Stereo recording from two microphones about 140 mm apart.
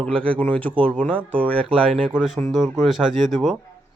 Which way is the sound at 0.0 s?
10° left (ahead or behind).